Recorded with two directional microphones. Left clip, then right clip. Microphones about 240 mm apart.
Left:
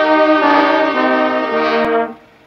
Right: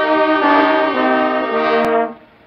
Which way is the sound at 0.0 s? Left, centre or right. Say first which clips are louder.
Left 2 dB; left.